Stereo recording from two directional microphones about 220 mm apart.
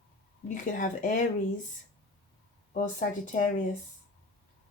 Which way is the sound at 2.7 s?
35° left (ahead or behind).